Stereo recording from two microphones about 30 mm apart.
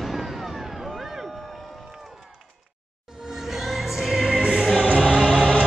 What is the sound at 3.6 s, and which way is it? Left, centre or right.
Music, centre.